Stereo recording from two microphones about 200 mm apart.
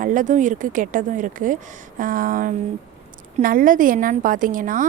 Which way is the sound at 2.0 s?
45° right (ahead or behind).